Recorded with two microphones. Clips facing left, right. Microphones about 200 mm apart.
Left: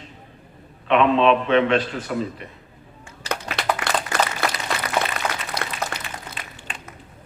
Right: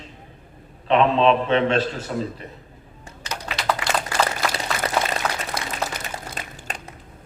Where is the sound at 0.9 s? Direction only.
35° right (ahead or behind).